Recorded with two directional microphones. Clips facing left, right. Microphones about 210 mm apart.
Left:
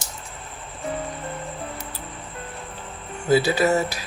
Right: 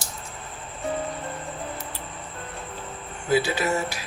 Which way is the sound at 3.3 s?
35° left (ahead or behind).